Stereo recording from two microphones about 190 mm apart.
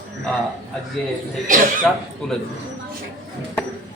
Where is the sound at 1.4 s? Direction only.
45° right (ahead or behind).